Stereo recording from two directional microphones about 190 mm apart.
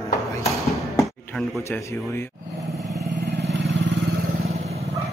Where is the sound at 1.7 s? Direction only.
15° left (ahead or behind).